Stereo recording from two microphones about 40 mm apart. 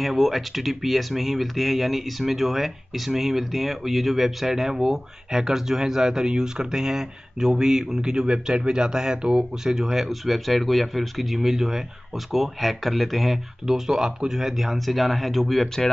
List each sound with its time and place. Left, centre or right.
0.0 s speech: centre
10.0 s speech: centre
13.7 s speech: centre